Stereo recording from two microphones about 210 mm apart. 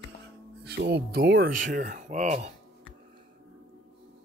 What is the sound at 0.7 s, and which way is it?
Speech, 50° right (ahead or behind).